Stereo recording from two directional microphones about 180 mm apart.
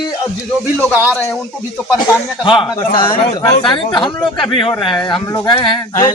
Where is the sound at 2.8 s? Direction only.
25° left (ahead or behind).